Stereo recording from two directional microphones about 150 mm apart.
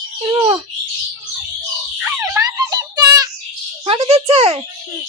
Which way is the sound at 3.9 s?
40° right (ahead or behind).